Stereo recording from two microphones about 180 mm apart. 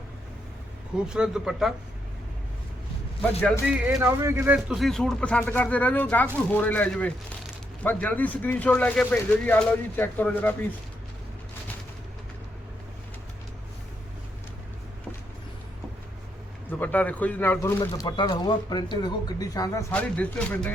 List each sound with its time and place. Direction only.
0.9 s speech: 5° right (ahead or behind)
3.7 s speech: 5° right (ahead or behind)
4.0 s speech: 15° right (ahead or behind)
4.7 s speech: centre (ahead or behind)
16.6 s speech: 10° left (ahead or behind)
19.9 s speech: 10° left (ahead or behind)